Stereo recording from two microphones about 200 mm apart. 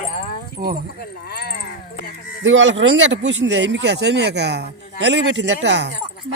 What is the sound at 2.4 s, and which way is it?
Speech, 65° right (ahead or behind).